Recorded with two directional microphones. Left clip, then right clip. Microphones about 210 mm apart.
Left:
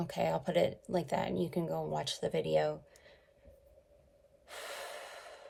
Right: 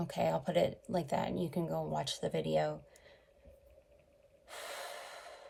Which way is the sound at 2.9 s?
25° left (ahead or behind).